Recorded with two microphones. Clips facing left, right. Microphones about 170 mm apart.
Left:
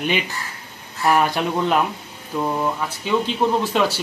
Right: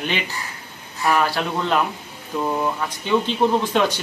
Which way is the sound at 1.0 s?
20° left (ahead or behind).